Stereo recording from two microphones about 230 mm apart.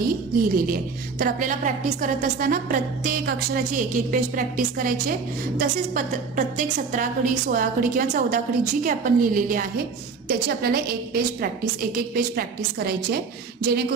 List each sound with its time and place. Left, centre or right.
0.0 s a woman's voice: right